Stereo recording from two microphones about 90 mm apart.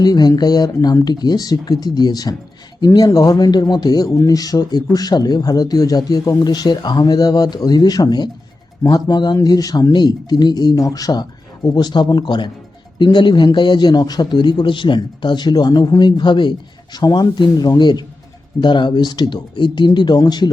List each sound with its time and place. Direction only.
0.0 s a man's voice: 50° left (ahead or behind)